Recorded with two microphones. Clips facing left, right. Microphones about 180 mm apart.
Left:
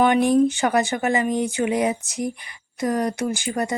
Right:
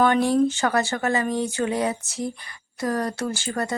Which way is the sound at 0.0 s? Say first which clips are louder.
Left 2 dB; 15° left (ahead or behind).